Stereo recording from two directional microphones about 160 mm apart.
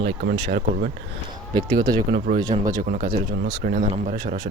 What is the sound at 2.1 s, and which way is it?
Speech, 70° right (ahead or behind).